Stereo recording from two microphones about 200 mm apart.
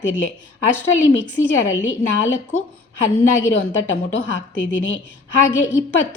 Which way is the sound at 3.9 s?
65° left (ahead or behind).